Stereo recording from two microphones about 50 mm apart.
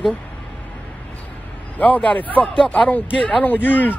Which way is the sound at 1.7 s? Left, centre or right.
Left.